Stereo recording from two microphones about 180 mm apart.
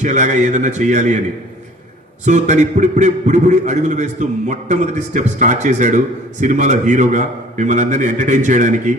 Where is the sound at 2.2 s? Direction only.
40° right (ahead or behind).